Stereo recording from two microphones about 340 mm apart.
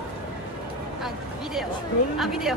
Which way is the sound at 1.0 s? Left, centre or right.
Centre.